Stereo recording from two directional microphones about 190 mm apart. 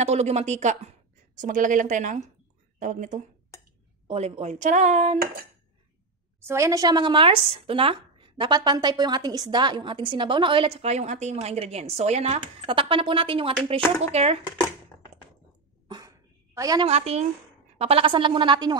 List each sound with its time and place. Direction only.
0.0 s speech: 35° right (ahead or behind)
6.4 s speech: 15° right (ahead or behind); by 14.4 s 35° right (ahead or behind)
16.5 s a woman's voice: 20° right (ahead or behind)
16.8 s speech: 35° right (ahead or behind)